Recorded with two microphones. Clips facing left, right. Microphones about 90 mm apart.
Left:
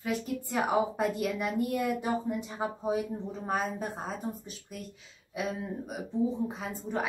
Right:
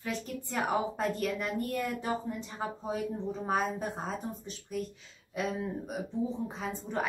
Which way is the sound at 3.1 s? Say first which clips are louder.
Right 1 dB; centre (ahead or behind).